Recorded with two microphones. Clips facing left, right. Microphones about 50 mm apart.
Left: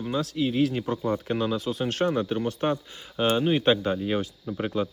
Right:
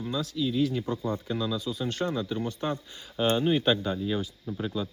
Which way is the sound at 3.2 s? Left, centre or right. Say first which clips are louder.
Left 2 dB; left.